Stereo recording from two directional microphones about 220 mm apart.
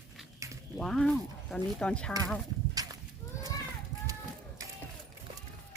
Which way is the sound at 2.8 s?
15° right (ahead or behind).